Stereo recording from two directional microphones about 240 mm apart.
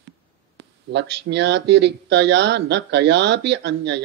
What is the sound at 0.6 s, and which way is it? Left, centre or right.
Speech, right.